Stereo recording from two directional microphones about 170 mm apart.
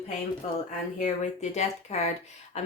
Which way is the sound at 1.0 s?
40° left (ahead or behind).